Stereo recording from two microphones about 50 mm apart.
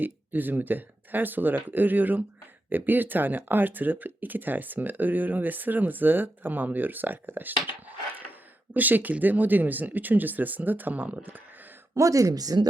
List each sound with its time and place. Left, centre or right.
0.0 s speech: right
11.9 s speech: right